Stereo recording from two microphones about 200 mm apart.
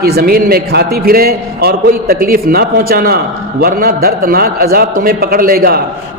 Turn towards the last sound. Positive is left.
turn(degrees=-50)  # may be behind; listen again after turning